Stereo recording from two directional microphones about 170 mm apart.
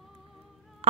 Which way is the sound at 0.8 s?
35° right (ahead or behind).